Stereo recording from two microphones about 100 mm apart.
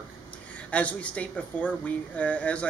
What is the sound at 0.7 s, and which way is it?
Speech, 15° left (ahead or behind).